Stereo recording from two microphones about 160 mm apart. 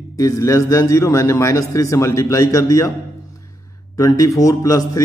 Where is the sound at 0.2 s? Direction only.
20° left (ahead or behind).